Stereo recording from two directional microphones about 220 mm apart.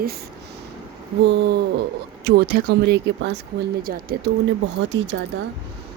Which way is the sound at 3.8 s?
40° right (ahead or behind).